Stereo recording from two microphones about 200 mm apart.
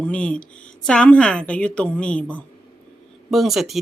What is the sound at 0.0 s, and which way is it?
Speech, 5° left (ahead or behind).